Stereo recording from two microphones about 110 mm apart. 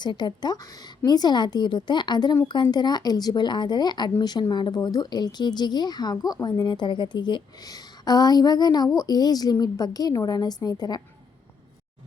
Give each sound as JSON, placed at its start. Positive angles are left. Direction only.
{"t": 0.0, "sound": "speech", "side_deg": 40}